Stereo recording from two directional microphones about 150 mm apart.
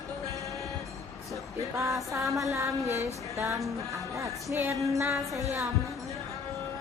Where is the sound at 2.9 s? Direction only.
15° right (ahead or behind).